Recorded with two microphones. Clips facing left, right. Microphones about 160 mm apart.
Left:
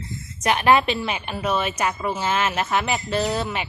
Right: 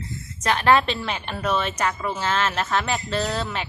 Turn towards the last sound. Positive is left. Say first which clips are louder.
# left 2 dB
turn(degrees=15)  # may be behind; listen again after turning